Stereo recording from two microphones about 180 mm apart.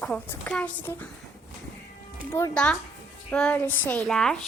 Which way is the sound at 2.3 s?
15° left (ahead or behind).